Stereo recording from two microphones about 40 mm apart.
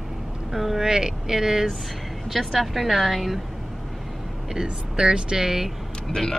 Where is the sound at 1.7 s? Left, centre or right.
Centre.